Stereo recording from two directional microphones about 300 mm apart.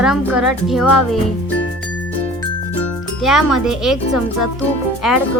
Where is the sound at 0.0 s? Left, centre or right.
Centre.